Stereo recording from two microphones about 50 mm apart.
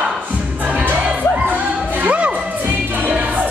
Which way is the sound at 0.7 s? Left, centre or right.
Right.